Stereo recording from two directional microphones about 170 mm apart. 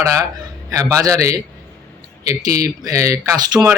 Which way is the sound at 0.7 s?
20° right (ahead or behind).